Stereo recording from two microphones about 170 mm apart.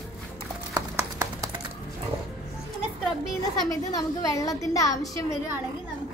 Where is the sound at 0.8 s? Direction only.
20° right (ahead or behind).